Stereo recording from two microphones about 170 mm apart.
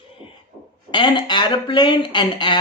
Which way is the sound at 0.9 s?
30° left (ahead or behind).